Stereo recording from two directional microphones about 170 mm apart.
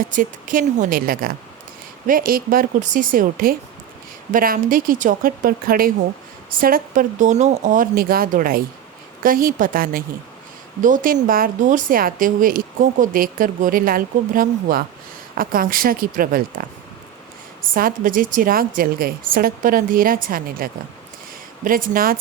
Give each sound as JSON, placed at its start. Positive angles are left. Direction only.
{"t": 0.0, "sound": "a woman's voice", "side_deg": -50}